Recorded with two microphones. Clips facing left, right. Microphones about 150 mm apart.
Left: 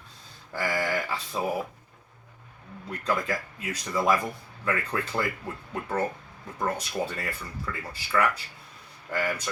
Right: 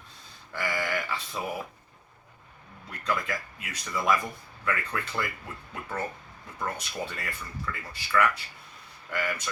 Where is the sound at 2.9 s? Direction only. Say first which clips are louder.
Left 3 dB; 30° left (ahead or behind).